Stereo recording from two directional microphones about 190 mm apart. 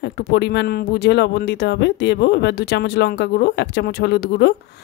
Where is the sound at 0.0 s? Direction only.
60° left (ahead or behind).